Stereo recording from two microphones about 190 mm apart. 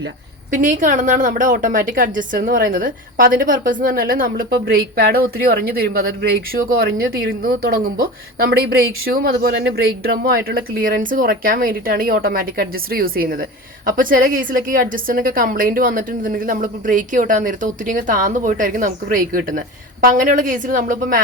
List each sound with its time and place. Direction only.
0.5 s a woman's voice: 40° right (ahead or behind)